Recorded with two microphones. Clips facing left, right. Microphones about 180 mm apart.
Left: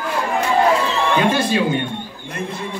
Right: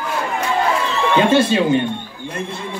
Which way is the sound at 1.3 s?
25° right (ahead or behind).